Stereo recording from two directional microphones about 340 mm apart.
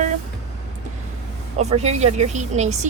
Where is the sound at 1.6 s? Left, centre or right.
Centre.